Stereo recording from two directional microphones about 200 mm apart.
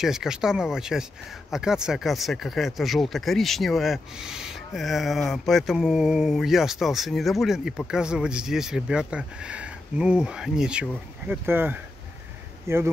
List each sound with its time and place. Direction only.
0.0 s speech: centre (ahead or behind)